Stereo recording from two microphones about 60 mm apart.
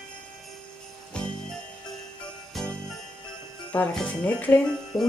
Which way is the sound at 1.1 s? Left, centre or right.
Centre.